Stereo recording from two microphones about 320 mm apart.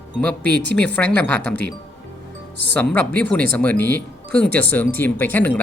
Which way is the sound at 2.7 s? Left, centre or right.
Centre.